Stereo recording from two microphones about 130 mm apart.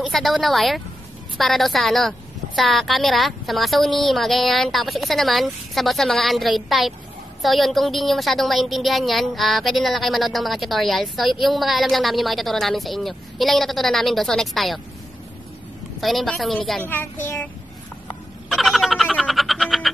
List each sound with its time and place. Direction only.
0.0 s a woman's voice: centre (ahead or behind)
16.0 s a woman's voice: centre (ahead or behind)
16.8 s child singing: 15° left (ahead or behind)
18.5 s frog: centre (ahead or behind)